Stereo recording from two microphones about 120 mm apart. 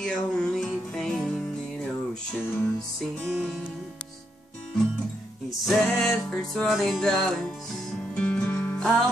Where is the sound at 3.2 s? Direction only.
Centre (ahead or behind).